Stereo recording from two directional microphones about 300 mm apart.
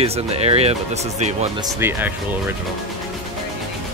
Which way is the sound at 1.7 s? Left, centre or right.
Centre.